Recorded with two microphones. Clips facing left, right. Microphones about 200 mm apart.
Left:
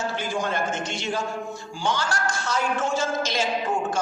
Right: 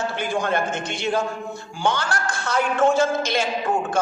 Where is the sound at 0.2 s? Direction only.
60° right (ahead or behind).